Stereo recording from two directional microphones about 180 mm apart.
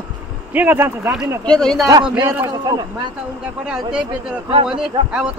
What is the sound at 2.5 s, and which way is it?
Speech, 20° right (ahead or behind).